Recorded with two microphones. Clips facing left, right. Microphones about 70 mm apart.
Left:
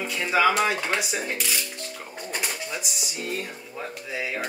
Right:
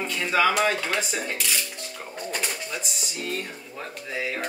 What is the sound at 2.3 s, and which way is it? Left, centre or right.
Speech, centre.